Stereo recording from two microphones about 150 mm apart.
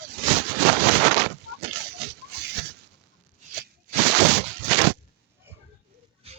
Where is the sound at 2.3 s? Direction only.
90° right.